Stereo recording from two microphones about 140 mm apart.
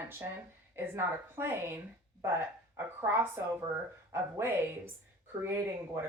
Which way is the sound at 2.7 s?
15° right (ahead or behind).